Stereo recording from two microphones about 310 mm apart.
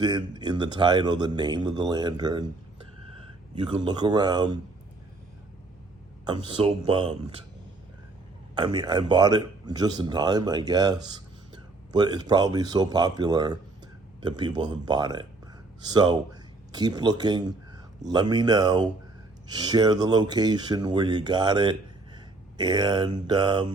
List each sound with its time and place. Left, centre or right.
0.0 s speech: centre
3.6 s speech: centre
6.2 s speech: centre
8.5 s speech: centre